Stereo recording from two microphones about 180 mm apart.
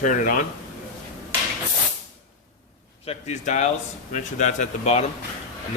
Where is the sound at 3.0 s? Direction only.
40° left (ahead or behind).